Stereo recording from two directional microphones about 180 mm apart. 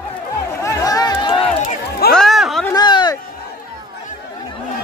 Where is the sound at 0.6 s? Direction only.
20° left (ahead or behind).